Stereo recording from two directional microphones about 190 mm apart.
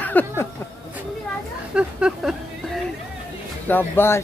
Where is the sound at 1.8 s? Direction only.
5° right (ahead or behind).